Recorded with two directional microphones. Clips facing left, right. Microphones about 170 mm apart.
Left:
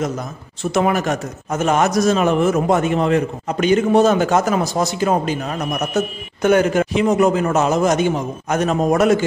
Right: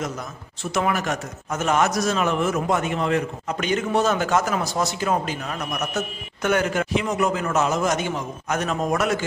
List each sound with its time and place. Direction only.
0.7 s a man's voice: 25° left (ahead or behind)
1.0 s a man's voice: 35° left (ahead or behind)
1.7 s a man's voice: 25° left (ahead or behind)
2.4 s a man's voice: 40° left (ahead or behind)
3.6 s a man's voice: 20° left (ahead or behind)
4.3 s a man's voice: 35° left (ahead or behind)